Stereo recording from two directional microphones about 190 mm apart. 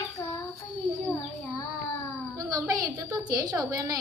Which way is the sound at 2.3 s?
20° right (ahead or behind).